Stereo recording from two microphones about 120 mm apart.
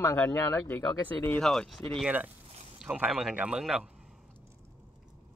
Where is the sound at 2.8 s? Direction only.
10° right (ahead or behind).